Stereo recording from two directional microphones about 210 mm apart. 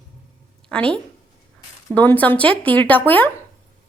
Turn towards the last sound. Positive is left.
turn(degrees=10)  # may be behind; listen again after turning